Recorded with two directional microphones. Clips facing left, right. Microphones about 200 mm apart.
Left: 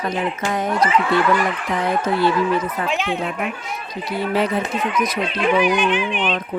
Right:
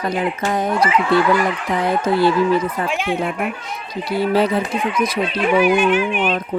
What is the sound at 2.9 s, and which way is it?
Speech, 10° right (ahead or behind).